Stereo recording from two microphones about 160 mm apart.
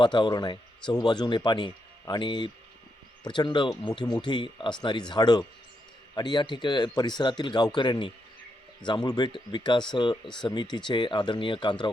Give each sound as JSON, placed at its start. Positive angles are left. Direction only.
{"t": 0.0, "sound": "speech", "side_deg": 30}